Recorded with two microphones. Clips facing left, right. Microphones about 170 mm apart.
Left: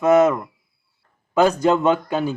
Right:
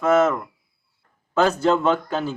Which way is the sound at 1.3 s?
15° left (ahead or behind).